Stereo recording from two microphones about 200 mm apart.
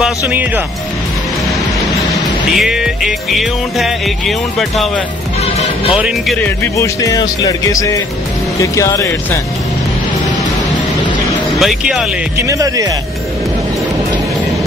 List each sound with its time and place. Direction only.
0.0 s music: 5° right (ahead or behind)
2.1 s music: centre (ahead or behind)
5.4 s speech: 30° left (ahead or behind)
5.9 s music: 5° right (ahead or behind)
6.4 s speech: 15° left (ahead or behind)
11.6 s music: centre (ahead or behind)
12.4 s speech: 15° right (ahead or behind)